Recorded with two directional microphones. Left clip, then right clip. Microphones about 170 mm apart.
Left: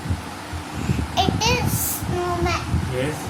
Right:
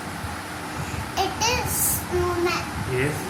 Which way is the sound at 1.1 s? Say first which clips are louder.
Left 3 dB; 25° left (ahead or behind).